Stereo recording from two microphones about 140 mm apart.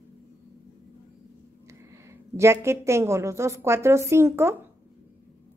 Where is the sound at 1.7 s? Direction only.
20° right (ahead or behind).